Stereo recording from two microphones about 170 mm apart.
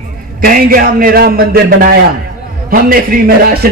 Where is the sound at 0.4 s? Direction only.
55° right (ahead or behind).